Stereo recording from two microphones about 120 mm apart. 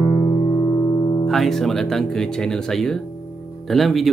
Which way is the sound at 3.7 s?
Centre (ahead or behind).